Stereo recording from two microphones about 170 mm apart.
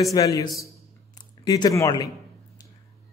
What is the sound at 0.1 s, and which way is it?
Speech, 20° left (ahead or behind).